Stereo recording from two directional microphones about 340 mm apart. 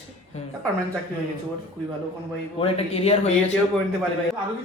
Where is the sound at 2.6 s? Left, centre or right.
Centre.